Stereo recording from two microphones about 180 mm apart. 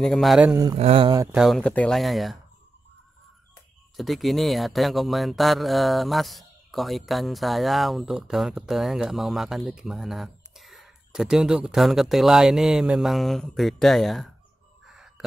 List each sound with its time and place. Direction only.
0.0 s speech: centre (ahead or behind)
0.7 s speech: 30° right (ahead or behind)
1.3 s speech: centre (ahead or behind)
3.9 s speech: centre (ahead or behind)
14.9 s whispering: centre (ahead or behind)